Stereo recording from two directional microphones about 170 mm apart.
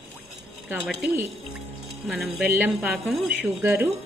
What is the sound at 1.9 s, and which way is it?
A woman's voice, centre (ahead or behind).